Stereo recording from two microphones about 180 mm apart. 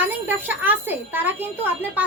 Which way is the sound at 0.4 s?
10° right (ahead or behind).